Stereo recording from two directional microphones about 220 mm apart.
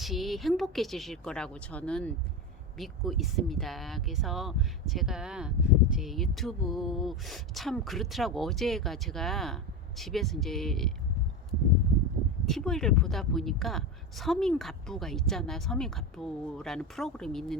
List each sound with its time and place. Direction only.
0.0 s speech: centre (ahead or behind)
12.5 s speech: centre (ahead or behind)